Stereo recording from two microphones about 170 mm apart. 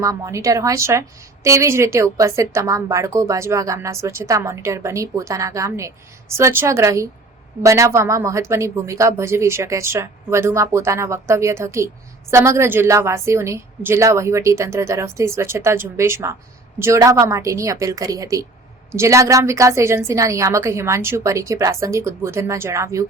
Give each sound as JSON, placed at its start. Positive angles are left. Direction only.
{"t": 0.0, "sound": "a woman's voice", "side_deg": -20}